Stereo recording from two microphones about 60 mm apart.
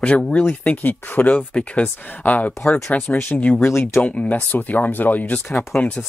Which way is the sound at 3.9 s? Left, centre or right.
Left.